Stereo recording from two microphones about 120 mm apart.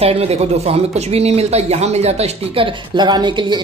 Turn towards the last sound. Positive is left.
turn(degrees=-40)  # may be behind; listen again after turning